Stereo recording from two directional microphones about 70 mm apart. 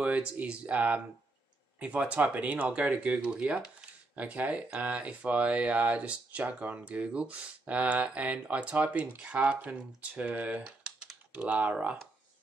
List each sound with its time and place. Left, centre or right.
0.0 s speech: centre
10.8 s typing: centre
11.3 s speech: right